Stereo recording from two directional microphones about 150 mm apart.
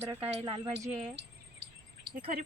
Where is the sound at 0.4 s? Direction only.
30° right (ahead or behind).